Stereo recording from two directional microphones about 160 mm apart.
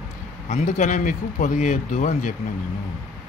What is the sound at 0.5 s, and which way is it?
A man's voice, 50° left (ahead or behind).